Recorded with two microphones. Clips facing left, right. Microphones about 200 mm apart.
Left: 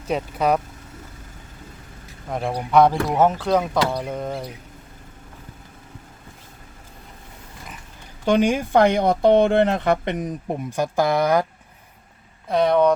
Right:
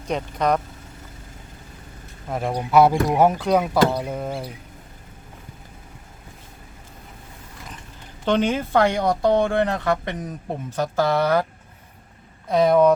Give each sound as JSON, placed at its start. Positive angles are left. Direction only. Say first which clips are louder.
{"t": 0.1, "sound": "speech", "louder": "left 1 dB", "side_deg": 5}
{"t": 2.3, "sound": "speech", "louder": "even", "side_deg": 0}
{"t": 8.2, "sound": "speech", "louder": "left 2 dB", "side_deg": 10}
{"t": 12.5, "sound": "speech", "louder": "right 1 dB", "side_deg": 0}